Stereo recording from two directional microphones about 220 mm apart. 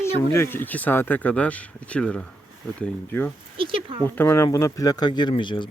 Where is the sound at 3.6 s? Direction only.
25° right (ahead or behind).